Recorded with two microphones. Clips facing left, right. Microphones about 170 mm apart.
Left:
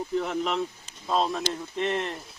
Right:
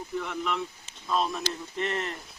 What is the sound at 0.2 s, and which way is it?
Speech, 35° left (ahead or behind).